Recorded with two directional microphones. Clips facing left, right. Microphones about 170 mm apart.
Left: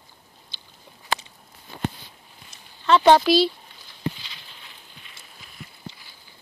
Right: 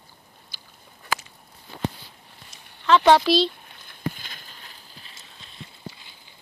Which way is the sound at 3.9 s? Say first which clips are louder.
Left 1 dB; 50° right (ahead or behind).